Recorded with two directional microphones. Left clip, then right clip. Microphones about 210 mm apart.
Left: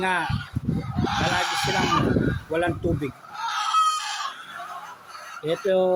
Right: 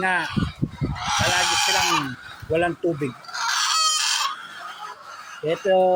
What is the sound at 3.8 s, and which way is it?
Chicken, 35° right (ahead or behind).